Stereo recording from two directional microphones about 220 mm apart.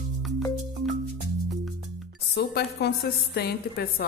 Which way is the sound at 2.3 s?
50° left (ahead or behind).